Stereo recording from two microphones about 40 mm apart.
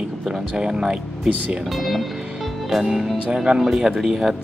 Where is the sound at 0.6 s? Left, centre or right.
Centre.